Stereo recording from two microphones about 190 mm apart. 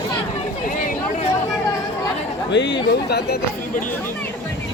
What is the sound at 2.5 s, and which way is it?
Speech, 65° left (ahead or behind).